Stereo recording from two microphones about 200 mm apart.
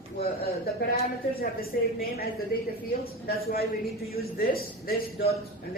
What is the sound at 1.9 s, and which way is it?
Speech, 50° left (ahead or behind).